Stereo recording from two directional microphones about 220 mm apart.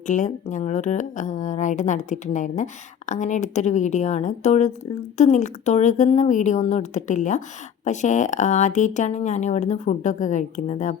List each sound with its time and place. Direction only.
0.1 s speech: 35° left (ahead or behind)